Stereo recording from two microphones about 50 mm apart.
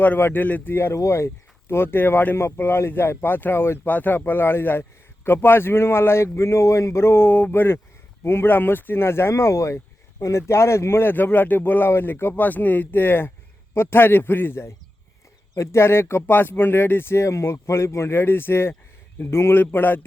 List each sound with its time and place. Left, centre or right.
0.2 s speech: left
0.4 s speech: left
0.7 s speech: left
0.9 s speech: left
3.8 s speech: left
11.9 s speech: left
12.3 s speech: left
16.3 s speech: left
19.5 s speech: left